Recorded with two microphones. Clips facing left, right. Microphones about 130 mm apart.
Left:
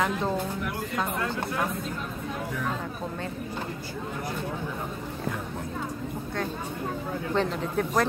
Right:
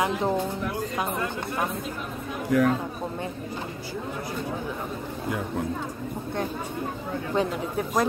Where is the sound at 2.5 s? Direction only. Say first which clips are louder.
Right 17 dB; 80° right.